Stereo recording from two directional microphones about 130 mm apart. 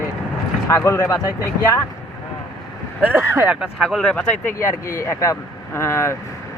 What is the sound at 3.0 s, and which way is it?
Speech, 15° right (ahead or behind).